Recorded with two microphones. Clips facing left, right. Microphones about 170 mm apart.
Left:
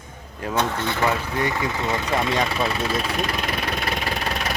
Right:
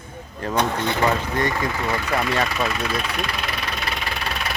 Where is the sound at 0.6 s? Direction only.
15° right (ahead or behind).